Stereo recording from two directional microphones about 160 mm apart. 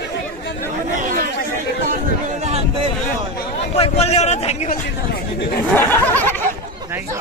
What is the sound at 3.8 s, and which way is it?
Speech, 40° left (ahead or behind).